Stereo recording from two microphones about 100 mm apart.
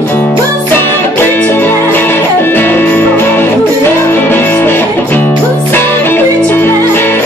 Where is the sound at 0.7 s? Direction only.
20° left (ahead or behind).